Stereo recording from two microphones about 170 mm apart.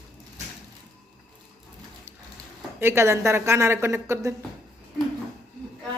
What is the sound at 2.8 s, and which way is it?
Speech, 15° right (ahead or behind).